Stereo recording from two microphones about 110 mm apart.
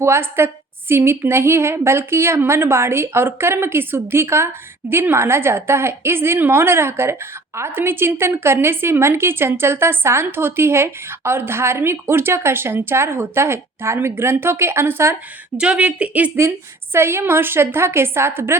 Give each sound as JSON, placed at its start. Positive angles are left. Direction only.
{"t": 0.0, "sound": "a woman's voice", "side_deg": -20}
{"t": 15.5, "sound": "a woman's voice", "side_deg": -10}